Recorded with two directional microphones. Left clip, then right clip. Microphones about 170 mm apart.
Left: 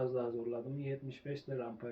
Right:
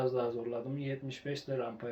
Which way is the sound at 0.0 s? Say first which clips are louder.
Right 4 dB; 20° right (ahead or behind).